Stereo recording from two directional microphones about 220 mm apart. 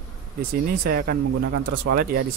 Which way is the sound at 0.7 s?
45° right (ahead or behind).